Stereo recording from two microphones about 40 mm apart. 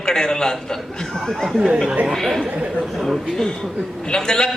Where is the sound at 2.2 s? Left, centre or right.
Centre.